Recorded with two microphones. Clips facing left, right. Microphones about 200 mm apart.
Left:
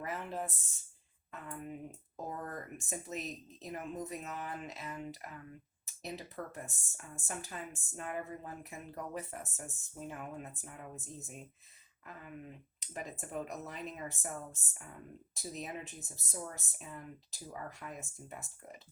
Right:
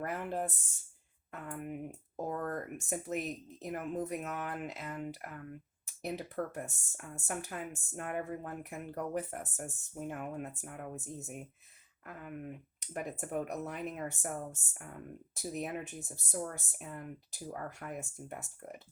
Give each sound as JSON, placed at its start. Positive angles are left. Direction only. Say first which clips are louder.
{"t": 0.0, "sound": "speech", "louder": "right 3 dB", "side_deg": -55}